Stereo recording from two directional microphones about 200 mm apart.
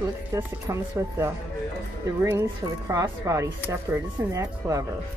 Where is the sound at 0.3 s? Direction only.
15° right (ahead or behind).